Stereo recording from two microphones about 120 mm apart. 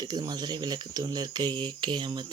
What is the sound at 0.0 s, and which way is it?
Speech, 35° right (ahead or behind).